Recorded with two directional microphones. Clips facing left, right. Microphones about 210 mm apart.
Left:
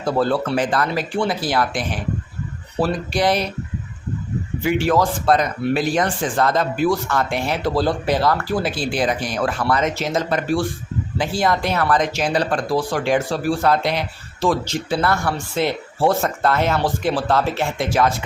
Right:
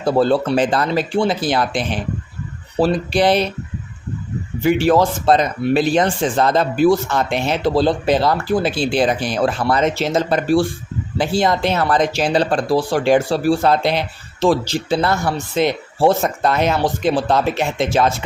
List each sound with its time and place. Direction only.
0.0 s speech: 30° right (ahead or behind)
4.8 s speech: 30° right (ahead or behind)